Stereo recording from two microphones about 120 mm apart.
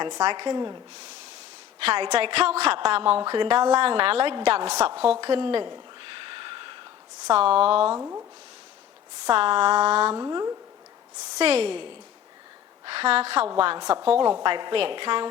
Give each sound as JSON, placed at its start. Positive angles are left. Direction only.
{"t": 0.0, "sound": "a woman's voice", "side_deg": -45}
{"t": 2.0, "sound": "a woman's voice", "side_deg": -55}
{"t": 3.2, "sound": "a woman's voice", "side_deg": -40}
{"t": 5.2, "sound": "a sound", "side_deg": -50}
{"t": 7.3, "sound": "a woman's voice", "side_deg": -55}
{"t": 7.9, "sound": "speech", "side_deg": -20}
{"t": 9.3, "sound": "a woman's voice", "side_deg": -50}
{"t": 10.2, "sound": "speech", "side_deg": -30}
{"t": 11.3, "sound": "a woman's voice", "side_deg": -55}